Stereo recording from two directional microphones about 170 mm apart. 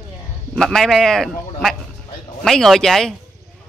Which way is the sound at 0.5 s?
Centre (ahead or behind).